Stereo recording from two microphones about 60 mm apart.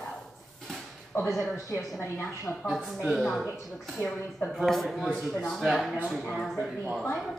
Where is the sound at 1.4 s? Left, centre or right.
Left.